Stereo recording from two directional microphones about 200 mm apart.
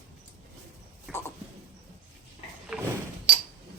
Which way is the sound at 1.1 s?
5° right (ahead or behind).